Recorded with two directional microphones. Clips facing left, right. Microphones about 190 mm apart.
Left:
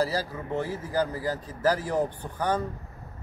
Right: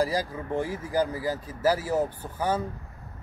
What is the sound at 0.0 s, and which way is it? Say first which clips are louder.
A man's voice: right 1 dB; 15° right (ahead or behind).